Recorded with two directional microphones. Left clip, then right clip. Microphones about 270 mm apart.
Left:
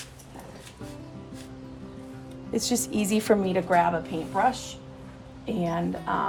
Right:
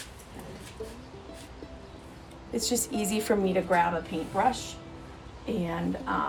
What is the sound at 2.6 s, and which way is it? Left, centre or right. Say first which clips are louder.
A woman's voice: left 2 dB; left.